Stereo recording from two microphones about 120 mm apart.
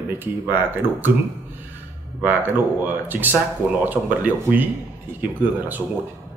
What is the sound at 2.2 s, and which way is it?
Speech, 15° right (ahead or behind).